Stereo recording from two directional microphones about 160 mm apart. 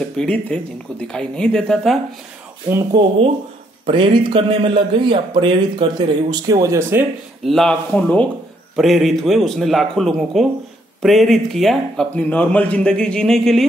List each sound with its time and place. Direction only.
0.2 s speech: 5° left (ahead or behind)
2.7 s speech: 30° right (ahead or behind)
7.4 s speech: 5° left (ahead or behind)